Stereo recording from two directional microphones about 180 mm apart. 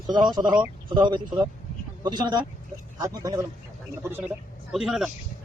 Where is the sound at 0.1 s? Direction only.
25° right (ahead or behind).